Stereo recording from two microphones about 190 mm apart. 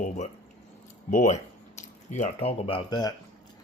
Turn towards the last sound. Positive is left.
turn(degrees=25)  # may be behind; listen again after turning